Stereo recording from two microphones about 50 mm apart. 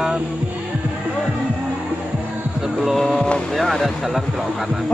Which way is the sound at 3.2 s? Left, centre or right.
Centre.